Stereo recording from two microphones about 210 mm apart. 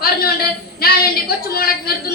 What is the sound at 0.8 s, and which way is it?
A woman's voice, 45° left (ahead or behind).